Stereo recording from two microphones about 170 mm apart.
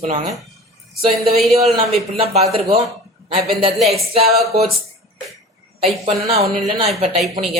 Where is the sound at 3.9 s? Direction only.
35° right (ahead or behind).